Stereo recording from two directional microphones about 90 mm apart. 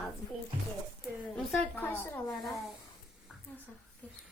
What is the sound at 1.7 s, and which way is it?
Speech, 25° left (ahead or behind).